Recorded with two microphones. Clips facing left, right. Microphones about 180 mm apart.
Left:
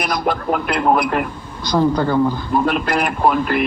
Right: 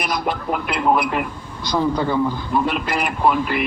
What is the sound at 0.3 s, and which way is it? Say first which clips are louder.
Speech: left 4 dB; 50° left (ahead or behind).